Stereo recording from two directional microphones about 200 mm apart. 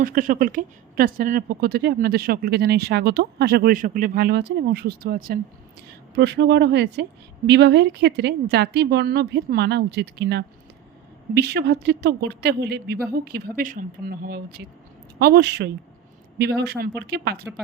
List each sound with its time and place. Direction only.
0.0 s a woman's voice: 45° right (ahead or behind)
6.1 s a woman's voice: 60° right (ahead or behind)